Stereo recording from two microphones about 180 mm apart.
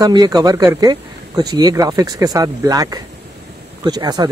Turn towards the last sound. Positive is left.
turn(degrees=-20)  # may be behind; listen again after turning